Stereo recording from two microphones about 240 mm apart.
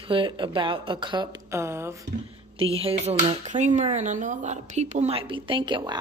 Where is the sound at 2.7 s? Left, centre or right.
Right.